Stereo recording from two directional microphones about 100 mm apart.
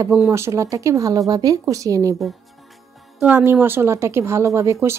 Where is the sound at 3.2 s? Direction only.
20° right (ahead or behind).